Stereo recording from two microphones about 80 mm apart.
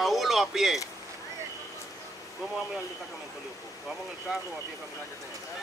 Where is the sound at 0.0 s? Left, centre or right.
Centre.